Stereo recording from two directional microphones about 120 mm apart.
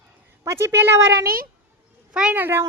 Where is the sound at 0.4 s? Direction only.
20° right (ahead or behind).